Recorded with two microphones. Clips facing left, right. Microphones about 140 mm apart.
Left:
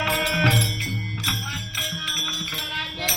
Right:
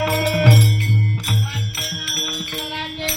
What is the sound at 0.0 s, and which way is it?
Music, 50° right (ahead or behind).